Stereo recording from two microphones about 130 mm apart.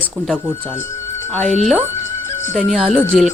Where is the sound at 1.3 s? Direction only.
10° left (ahead or behind).